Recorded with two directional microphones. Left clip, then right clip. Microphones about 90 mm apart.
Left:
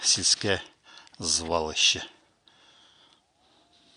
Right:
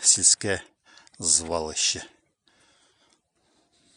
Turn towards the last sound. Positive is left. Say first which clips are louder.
# left 5 dB
turn(degrees=-45)  # may be behind; listen again after turning